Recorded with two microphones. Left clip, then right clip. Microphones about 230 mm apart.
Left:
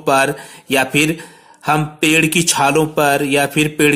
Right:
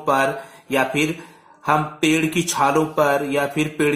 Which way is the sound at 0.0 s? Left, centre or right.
Left.